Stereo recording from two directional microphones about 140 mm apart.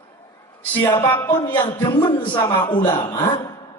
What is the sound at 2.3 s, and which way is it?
A man's voice, 35° left (ahead or behind).